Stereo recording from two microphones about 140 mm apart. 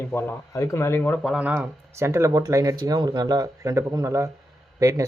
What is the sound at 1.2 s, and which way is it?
Speech, 5° right (ahead or behind).